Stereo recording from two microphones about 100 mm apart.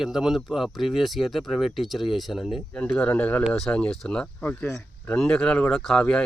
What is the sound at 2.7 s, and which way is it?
Speech, 10° left (ahead or behind).